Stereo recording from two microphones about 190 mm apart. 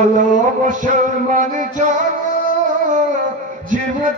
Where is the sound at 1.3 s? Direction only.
40° right (ahead or behind).